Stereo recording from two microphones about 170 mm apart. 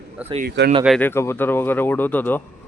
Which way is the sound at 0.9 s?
10° left (ahead or behind).